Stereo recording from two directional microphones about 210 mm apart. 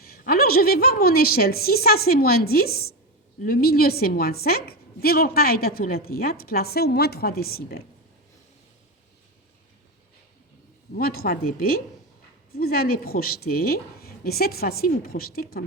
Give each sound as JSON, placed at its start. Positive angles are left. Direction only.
{"t": 0.0, "sound": "a woman's voice", "side_deg": 45}
{"t": 10.9, "sound": "a woman's voice", "side_deg": 45}